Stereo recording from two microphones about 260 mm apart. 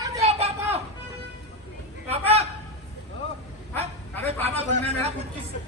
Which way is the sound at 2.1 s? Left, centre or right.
Right.